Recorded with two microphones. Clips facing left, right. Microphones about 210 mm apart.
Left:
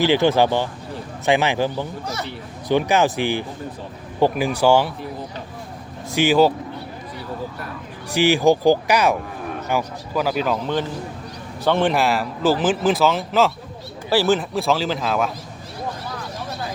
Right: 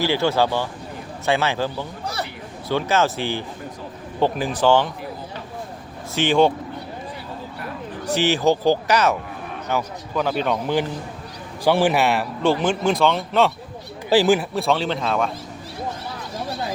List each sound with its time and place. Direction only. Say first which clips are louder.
0.0 s speech: left 3 dB; 15° left (ahead or behind)
6.1 s speech: left 2 dB; 5° left (ahead or behind)
8.0 s speech: left 3 dB; 10° left (ahead or behind)
11.6 s a man's voice: right 1 dB; 10° right (ahead or behind)
14.1 s a man's voice: right 2 dB; 15° right (ahead or behind)
14.5 s a man's voice: left 1 dB; centre (ahead or behind)